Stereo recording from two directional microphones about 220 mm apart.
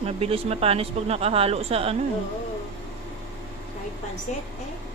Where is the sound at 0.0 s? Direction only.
25° right (ahead or behind).